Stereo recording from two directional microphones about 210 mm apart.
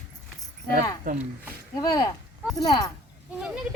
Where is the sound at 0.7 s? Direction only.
40° right (ahead or behind).